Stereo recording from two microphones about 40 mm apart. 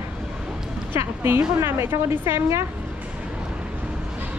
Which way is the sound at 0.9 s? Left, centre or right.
Right.